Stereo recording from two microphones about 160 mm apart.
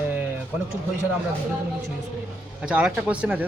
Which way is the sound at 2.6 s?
5° right (ahead or behind).